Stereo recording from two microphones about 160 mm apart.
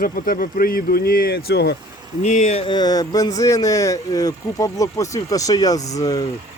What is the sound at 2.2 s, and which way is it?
Speech, 50° left (ahead or behind).